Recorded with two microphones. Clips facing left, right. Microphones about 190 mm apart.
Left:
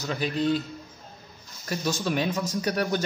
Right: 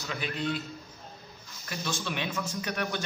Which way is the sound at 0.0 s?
40° left (ahead or behind).